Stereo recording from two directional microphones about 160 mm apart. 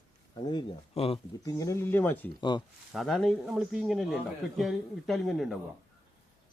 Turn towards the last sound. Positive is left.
turn(degrees=0)  # may be behind; listen again after turning